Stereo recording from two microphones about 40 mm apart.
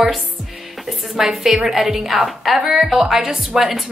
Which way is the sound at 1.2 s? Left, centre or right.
Centre.